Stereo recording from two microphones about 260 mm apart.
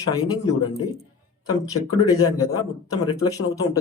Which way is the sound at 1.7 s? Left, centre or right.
Left.